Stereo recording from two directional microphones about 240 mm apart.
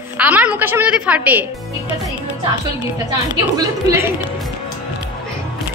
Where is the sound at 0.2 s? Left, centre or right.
Centre.